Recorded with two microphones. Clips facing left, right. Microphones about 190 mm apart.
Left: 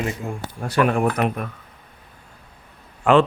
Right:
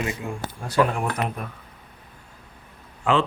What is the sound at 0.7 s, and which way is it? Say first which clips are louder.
Speech: left 3 dB; 65° left (ahead or behind).